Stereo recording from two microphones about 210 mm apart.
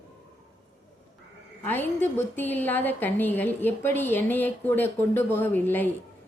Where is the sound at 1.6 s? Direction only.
10° left (ahead or behind).